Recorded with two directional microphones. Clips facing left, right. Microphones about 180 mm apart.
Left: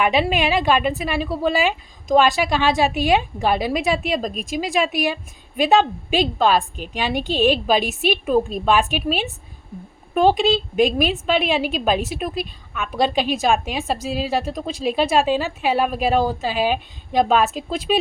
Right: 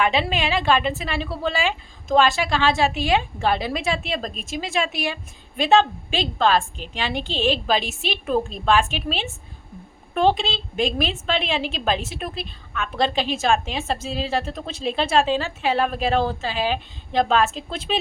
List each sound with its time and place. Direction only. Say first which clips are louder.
0.0 s a woman's voice: left 3 dB; 15° left (ahead or behind)